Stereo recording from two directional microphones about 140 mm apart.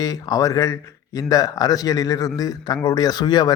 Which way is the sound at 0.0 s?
25° left (ahead or behind).